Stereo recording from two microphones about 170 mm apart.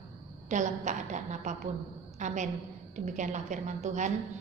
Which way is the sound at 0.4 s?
45° right (ahead or behind).